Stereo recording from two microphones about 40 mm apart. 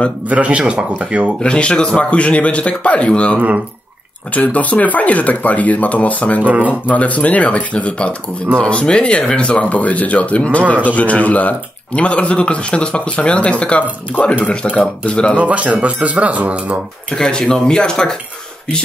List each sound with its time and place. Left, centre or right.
0.3 s speech: right
1.4 s speech: left
3.3 s speech: right
4.3 s speech: left
6.4 s speech: right
6.7 s speech: left
15.3 s speech: right
17.1 s speech: centre